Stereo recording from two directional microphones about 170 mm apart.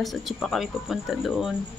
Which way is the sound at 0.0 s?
Centre (ahead or behind).